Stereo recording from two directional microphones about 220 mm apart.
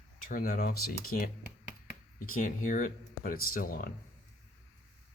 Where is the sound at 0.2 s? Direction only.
40° left (ahead or behind).